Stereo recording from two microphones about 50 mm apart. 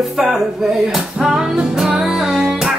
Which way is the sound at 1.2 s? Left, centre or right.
Centre.